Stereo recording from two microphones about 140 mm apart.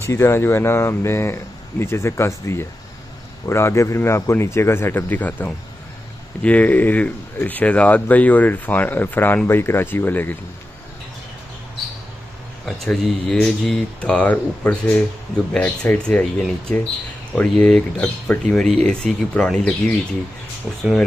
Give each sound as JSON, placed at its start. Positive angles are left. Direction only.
{"t": 0.0, "sound": "speech", "side_deg": 20}
{"t": 12.8, "sound": "speech", "side_deg": 0}